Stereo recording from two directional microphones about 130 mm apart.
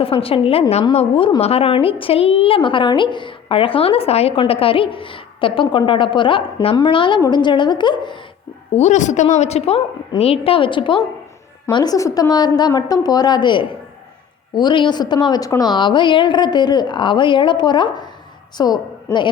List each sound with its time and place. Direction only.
0.0 s a woman's voice: 45° left (ahead or behind)
8.7 s a woman's voice: 65° left (ahead or behind); by 19.3 s 35° left (ahead or behind)